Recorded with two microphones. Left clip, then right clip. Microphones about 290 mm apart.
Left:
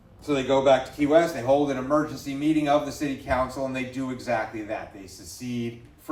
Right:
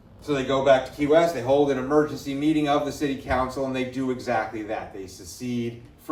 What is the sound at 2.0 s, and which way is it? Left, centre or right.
Speech, centre.